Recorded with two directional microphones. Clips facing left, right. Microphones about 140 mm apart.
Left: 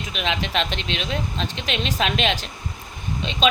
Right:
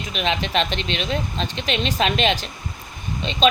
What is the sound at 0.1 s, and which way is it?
Speech, centre (ahead or behind).